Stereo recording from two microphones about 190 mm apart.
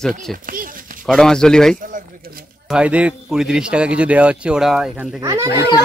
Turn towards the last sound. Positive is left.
turn(degrees=-15)  # may be behind; listen again after turning